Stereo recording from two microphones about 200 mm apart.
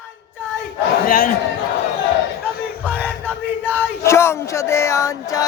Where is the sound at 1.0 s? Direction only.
45° left (ahead or behind).